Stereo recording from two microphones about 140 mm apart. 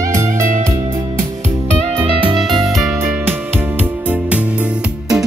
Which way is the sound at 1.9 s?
40° right (ahead or behind).